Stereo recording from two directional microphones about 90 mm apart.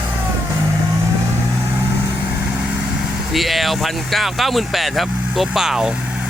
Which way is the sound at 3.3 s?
Centre (ahead or behind).